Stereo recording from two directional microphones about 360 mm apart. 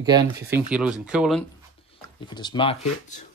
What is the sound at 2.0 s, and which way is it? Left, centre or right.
Speech, centre.